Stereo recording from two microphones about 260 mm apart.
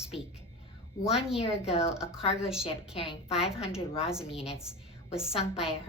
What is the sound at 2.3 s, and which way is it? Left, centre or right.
Speech, centre.